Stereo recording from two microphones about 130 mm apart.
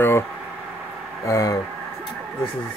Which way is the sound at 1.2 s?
25° left (ahead or behind).